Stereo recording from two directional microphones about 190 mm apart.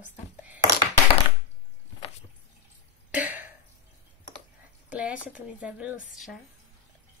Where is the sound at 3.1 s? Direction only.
10° right (ahead or behind).